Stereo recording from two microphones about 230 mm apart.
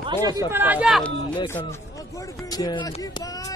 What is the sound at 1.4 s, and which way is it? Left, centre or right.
Speech, centre.